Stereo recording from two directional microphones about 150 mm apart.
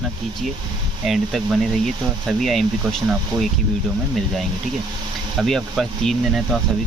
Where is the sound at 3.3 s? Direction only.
30° right (ahead or behind).